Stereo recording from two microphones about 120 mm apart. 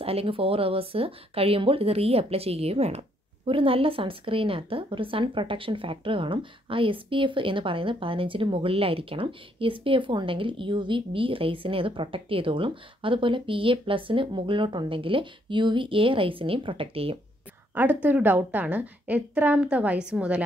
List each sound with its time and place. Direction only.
0.0 s speech: 55° right (ahead or behind)
17.7 s a woman's voice: 15° right (ahead or behind)